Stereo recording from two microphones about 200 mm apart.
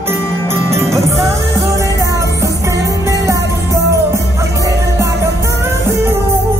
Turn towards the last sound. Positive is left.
turn(degrees=-15)  # may be behind; listen again after turning